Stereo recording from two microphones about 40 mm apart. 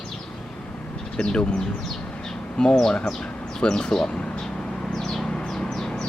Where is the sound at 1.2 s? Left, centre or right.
Left.